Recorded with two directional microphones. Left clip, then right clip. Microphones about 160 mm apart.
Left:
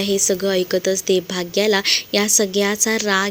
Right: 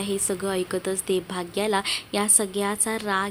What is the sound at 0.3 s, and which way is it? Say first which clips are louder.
A woman's voice: left 8 dB; 25° left (ahead or behind).